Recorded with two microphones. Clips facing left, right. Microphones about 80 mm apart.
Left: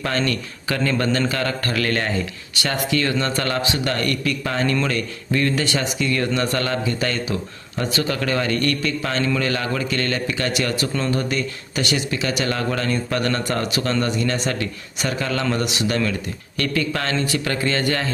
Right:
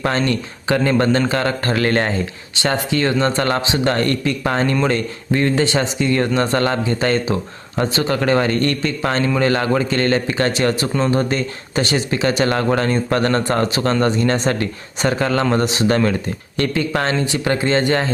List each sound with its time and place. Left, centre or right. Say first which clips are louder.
0.2 s speech: right 3 dB; right